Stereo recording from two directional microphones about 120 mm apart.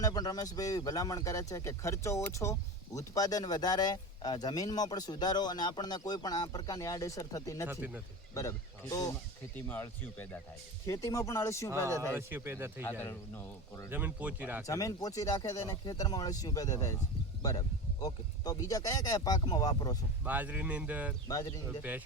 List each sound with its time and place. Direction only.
0.0 s speech: 35° left (ahead or behind)
7.7 s speech: 15° right (ahead or behind)
8.4 s speech: 30° left (ahead or behind)
9.6 s speech: 15° left (ahead or behind)
10.8 s speech: 25° left (ahead or behind)
12.1 s speech: 20° right (ahead or behind)
13.0 s speech: 20° left (ahead or behind)
13.9 s speech: 15° right (ahead or behind)
14.7 s speech: 30° left (ahead or behind)
18.0 s speech: 30° left (ahead or behind)
20.2 s speech: 15° right (ahead or behind)